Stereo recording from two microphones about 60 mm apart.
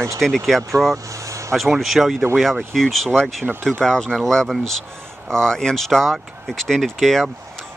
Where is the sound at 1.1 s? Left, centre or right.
Right.